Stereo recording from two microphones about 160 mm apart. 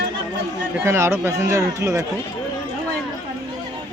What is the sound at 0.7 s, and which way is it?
Speech, 15° right (ahead or behind).